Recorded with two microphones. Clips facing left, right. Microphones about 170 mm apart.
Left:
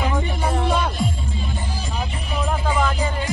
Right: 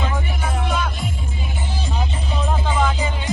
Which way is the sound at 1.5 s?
20° right (ahead or behind).